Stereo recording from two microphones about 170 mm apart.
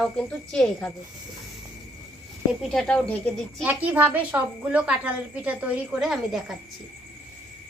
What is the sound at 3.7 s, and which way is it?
A woman's voice, 10° right (ahead or behind).